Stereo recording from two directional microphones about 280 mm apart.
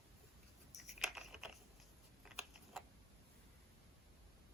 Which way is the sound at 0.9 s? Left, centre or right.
Centre.